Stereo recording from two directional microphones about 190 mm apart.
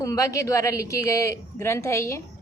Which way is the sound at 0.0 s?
15° left (ahead or behind).